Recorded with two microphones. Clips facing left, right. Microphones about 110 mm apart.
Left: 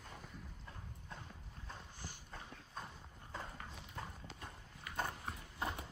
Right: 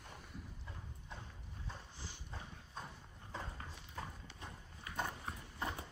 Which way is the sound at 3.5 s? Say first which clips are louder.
Even; 25° right (ahead or behind).